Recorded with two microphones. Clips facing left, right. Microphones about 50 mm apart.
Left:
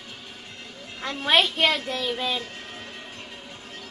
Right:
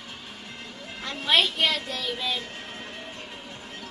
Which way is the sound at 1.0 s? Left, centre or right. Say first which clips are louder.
Left 2 dB; left.